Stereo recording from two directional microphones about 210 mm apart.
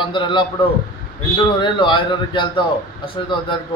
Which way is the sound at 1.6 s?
20° left (ahead or behind).